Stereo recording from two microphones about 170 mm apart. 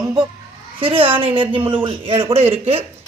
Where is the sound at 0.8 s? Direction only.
35° right (ahead or behind).